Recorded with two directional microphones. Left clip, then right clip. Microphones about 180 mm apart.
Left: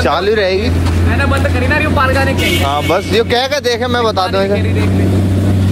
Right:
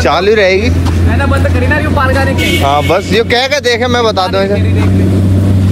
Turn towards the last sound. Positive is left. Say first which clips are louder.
# right 3 dB
turn(degrees=25)  # may be behind; listen again after turning